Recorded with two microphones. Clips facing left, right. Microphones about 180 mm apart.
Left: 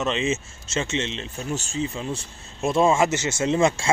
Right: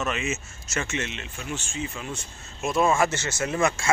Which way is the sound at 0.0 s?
30° left (ahead or behind).